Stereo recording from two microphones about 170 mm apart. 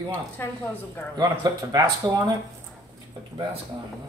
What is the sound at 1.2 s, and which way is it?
A woman's voice, 25° right (ahead or behind).